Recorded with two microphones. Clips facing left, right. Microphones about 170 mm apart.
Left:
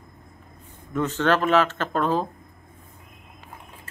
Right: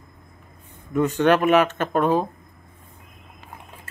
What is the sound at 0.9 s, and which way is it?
Speech, 15° right (ahead or behind).